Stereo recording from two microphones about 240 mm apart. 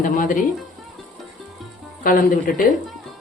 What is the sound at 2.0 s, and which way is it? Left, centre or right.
Speech, left.